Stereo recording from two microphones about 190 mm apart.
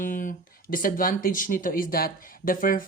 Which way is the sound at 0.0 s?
45° left (ahead or behind).